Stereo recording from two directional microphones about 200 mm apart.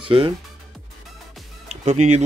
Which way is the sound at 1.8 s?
35° right (ahead or behind).